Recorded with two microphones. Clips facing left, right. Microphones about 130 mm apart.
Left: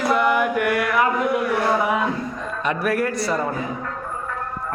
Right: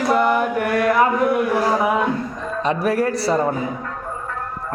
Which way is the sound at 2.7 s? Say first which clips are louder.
Right 3 dB; 30° right (ahead or behind).